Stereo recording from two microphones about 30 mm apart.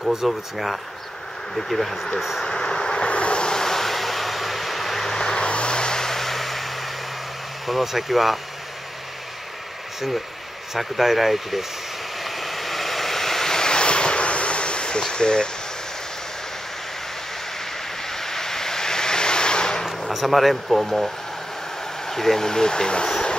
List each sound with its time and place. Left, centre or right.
0.3 s speech: centre
1.5 s speech: centre
2.4 s vehicle: left
3.1 s vehicle: left
3.4 s vehicle: centre
5.1 s vehicle: centre
5.4 s vehicle: left; by 6.7 s centre
7.6 s speech: centre
10.7 s speech: centre
12.2 s waves: centre; by 15.5 s left
18.1 s vehicle: centre
20.1 s speech: centre
22.5 s speech: left